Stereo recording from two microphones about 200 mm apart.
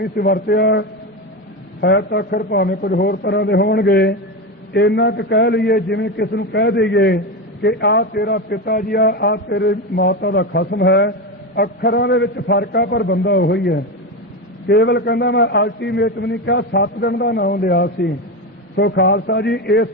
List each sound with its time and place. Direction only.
0.0 s a man's voice: 50° left (ahead or behind)